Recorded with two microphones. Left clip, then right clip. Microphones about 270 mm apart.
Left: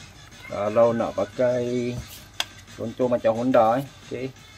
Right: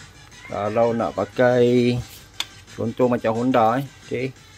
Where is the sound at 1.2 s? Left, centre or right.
Right.